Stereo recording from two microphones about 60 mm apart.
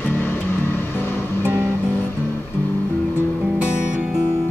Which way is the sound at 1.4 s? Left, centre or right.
Right.